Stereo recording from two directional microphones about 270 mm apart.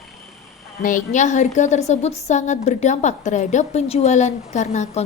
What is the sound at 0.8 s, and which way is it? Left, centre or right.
A woman's voice, left.